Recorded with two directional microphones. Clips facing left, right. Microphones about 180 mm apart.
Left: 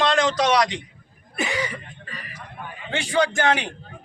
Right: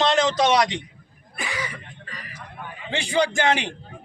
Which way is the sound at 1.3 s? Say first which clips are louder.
Left 5 dB; 25° left (ahead or behind).